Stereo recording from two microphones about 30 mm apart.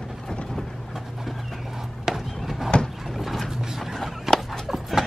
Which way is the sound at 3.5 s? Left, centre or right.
Centre.